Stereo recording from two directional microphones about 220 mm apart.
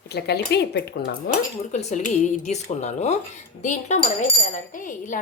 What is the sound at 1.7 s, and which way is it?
Speech, 35° left (ahead or behind).